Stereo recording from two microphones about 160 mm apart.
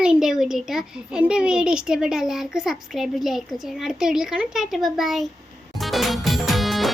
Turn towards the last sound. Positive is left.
turn(degrees=0)  # may be behind; listen again after turning